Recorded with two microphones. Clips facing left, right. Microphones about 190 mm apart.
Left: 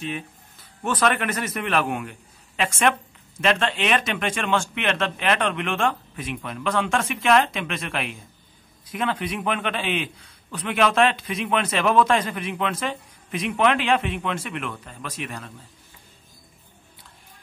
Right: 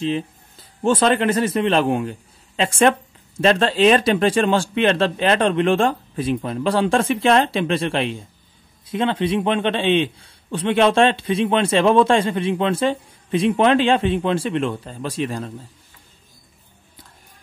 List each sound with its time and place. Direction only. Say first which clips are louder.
0.0 s a man's voice: right 9 dB; 30° right (ahead or behind)